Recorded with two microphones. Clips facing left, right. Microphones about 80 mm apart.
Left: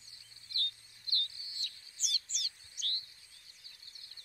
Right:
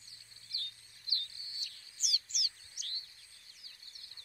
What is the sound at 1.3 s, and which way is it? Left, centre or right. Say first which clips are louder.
Bird: even; right.